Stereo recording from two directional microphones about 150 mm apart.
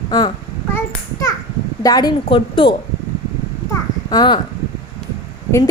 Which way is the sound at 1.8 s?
25° left (ahead or behind).